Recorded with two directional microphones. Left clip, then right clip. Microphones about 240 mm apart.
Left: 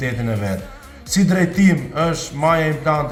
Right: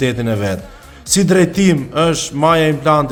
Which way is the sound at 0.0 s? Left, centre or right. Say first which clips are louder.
Right 6 dB; right.